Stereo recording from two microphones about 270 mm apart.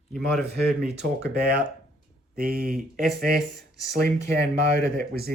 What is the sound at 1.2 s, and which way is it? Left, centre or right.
Speech, right.